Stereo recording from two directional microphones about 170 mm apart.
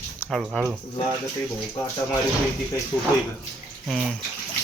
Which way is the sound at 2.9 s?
15° left (ahead or behind).